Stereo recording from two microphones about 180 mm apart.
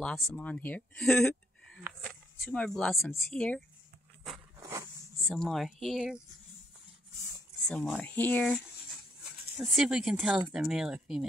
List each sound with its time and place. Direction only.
0.0 s speech: 5° left (ahead or behind)
4.6 s a sound: 15° right (ahead or behind)
5.3 s speech: centre (ahead or behind)
7.6 s speech: 5° left (ahead or behind)
9.6 s speech: 5° right (ahead or behind)